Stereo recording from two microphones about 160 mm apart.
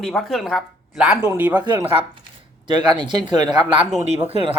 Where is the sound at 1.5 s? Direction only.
30° right (ahead or behind).